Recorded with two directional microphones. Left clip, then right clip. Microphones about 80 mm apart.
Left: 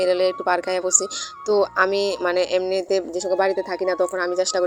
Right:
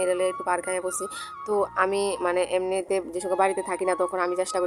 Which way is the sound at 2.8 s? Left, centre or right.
Left.